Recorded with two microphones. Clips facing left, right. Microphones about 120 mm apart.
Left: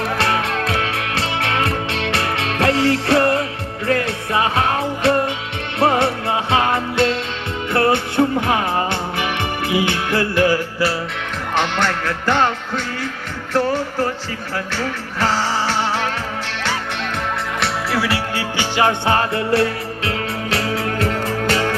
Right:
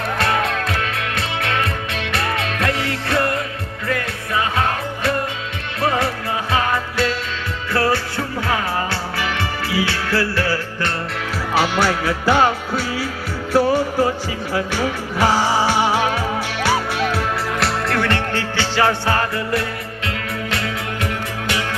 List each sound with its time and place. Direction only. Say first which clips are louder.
0.2 s music: right 3 dB; 30° left (ahead or behind)
5.8 s music: left 4 dB; 25° left (ahead or behind)
11.5 s music: right 2 dB; 10° right (ahead or behind)
17.6 s music: even; 5° left (ahead or behind); by 21.8 s 40° left (ahead or behind)